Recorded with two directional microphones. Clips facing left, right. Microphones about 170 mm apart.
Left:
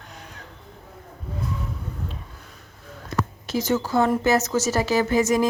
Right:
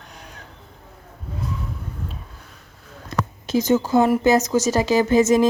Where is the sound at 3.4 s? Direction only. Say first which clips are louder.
Right 6 dB; 20° right (ahead or behind).